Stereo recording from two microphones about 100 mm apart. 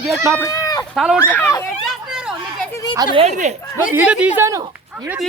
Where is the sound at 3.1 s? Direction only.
90° right.